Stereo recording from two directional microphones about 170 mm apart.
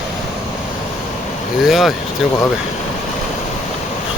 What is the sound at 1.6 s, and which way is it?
Speech, centre (ahead or behind).